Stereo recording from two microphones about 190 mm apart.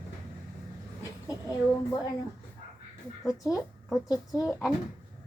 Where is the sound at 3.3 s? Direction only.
20° left (ahead or behind).